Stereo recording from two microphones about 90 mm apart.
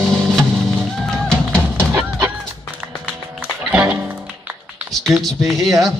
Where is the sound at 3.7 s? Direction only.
15° right (ahead or behind).